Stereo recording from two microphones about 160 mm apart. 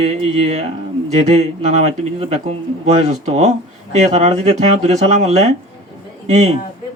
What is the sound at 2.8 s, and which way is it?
Speech, 45° right (ahead or behind).